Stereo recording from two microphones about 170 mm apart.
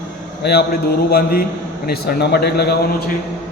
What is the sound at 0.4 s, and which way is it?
A man's voice, 70° left (ahead or behind).